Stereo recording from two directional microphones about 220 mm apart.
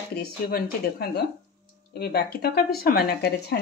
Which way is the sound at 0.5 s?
45° left (ahead or behind).